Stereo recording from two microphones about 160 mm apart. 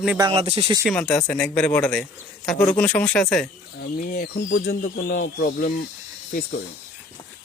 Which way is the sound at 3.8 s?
65° left (ahead or behind).